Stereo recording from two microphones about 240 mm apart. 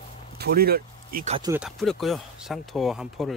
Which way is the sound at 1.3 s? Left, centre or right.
Centre.